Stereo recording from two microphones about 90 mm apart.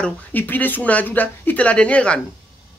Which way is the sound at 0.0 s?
20° left (ahead or behind).